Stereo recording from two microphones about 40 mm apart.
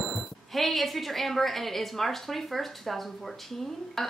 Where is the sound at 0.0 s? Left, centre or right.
Centre.